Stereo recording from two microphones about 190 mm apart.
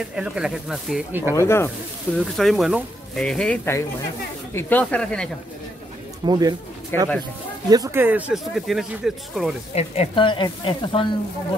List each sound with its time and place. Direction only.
0.0 s speech: 5° right (ahead or behind)
1.3 s speech: 15° left (ahead or behind)
2.1 s speech: centre (ahead or behind)
6.2 s speech: 20° right (ahead or behind)
6.9 s speech: 10° left (ahead or behind)
7.7 s speech: 15° right (ahead or behind)
9.8 s speech: 30° left (ahead or behind)